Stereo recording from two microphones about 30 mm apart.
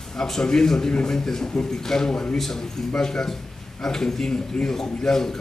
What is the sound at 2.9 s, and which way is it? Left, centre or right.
A man's voice, left.